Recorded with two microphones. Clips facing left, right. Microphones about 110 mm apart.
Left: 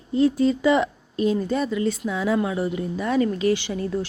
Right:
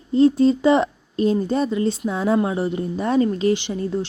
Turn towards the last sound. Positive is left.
turn(degrees=-25)  # may be behind; listen again after turning